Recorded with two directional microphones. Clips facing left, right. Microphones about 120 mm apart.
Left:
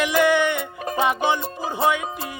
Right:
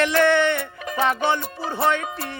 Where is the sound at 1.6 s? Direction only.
15° left (ahead or behind).